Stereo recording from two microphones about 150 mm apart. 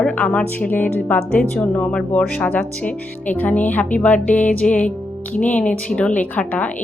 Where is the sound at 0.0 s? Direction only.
10° left (ahead or behind).